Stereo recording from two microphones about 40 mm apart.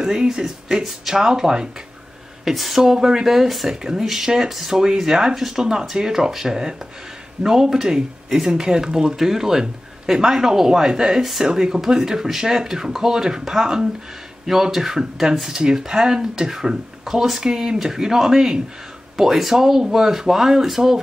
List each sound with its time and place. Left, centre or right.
0.0 s speech: centre
2.4 s speech: centre